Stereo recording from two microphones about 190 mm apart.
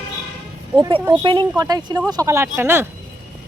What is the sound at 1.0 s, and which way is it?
Speech, 25° right (ahead or behind).